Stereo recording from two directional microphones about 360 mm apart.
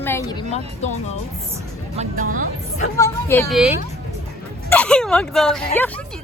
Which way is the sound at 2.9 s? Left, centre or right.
Centre.